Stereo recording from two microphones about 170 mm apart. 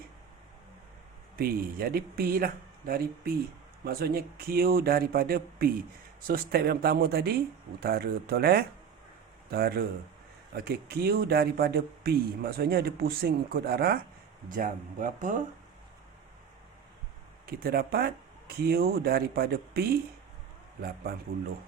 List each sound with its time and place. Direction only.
1.4 s speech: 60° right (ahead or behind)
14.5 s speech: 50° right (ahead or behind)
17.4 s speech: 65° right (ahead or behind)